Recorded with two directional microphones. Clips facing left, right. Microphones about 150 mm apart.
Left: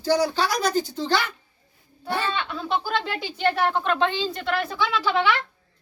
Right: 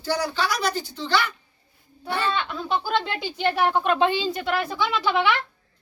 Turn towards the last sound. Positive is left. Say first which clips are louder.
# even
turn(degrees=-5)  # may be behind; listen again after turning